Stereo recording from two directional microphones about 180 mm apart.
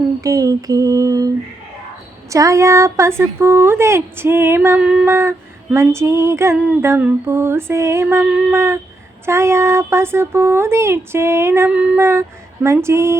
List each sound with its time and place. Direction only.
0.2 s mantra: 20° right (ahead or behind)
2.3 s female singing: 15° right (ahead or behind)